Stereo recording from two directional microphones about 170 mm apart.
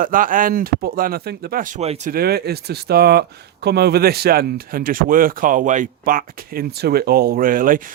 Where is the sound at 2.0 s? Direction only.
65° right (ahead or behind).